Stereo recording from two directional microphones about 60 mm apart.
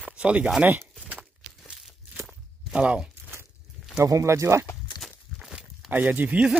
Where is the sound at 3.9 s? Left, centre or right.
Right.